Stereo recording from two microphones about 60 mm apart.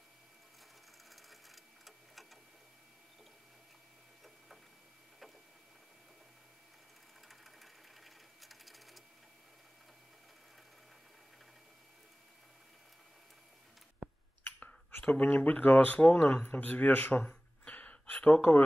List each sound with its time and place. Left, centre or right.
1.1 s sewing machine: centre
7.2 s sewing machine: centre
15.0 s speech: left
17.2 s a sound: centre